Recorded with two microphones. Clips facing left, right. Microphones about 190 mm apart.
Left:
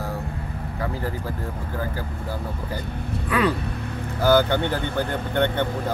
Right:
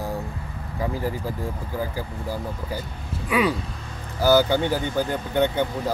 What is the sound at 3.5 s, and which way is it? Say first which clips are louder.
Vehicle: left 5 dB; 60° left (ahead or behind).